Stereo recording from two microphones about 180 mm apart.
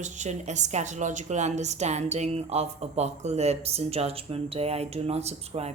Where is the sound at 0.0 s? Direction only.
40° right (ahead or behind).